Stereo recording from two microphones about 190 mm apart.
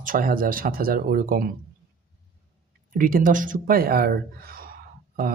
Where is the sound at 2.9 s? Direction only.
45° right (ahead or behind).